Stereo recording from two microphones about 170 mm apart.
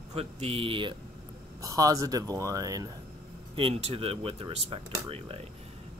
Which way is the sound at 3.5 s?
35° right (ahead or behind).